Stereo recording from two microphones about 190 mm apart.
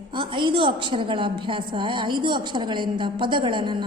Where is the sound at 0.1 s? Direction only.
25° right (ahead or behind).